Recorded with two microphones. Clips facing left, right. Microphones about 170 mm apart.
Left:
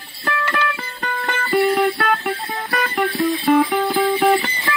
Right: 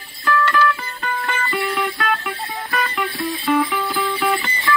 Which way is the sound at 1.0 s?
45° left (ahead or behind).